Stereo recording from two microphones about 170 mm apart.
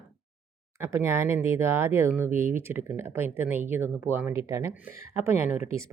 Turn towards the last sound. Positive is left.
turn(degrees=-15)  # may be behind; listen again after turning